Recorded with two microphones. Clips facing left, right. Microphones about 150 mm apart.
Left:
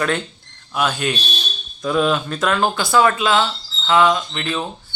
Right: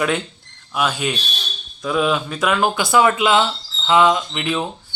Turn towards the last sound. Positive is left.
turn(degrees=-15)  # may be behind; listen again after turning